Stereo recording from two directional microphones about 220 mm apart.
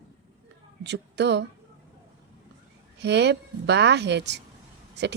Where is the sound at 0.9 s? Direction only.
50° right (ahead or behind).